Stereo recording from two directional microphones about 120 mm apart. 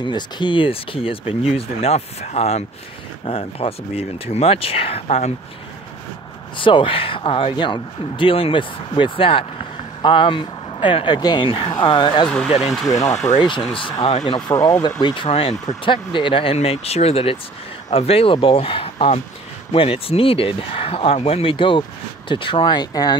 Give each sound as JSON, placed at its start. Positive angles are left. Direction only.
{"t": 0.0, "sound": "speech", "side_deg": 40}
{"t": 6.5, "sound": "speech", "side_deg": 45}
{"t": 11.4, "sound": "speech", "side_deg": 50}
{"t": 12.6, "sound": "speech", "side_deg": 0}
{"t": 12.9, "sound": "speech", "side_deg": 65}
{"t": 13.4, "sound": "speech", "side_deg": 40}
{"t": 14.5, "sound": "speech", "side_deg": 25}
{"t": 15.0, "sound": "speech", "side_deg": 35}
{"t": 15.2, "sound": "speech", "side_deg": 50}